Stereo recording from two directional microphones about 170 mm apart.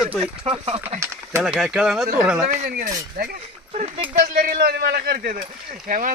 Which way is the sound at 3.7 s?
40° right (ahead or behind).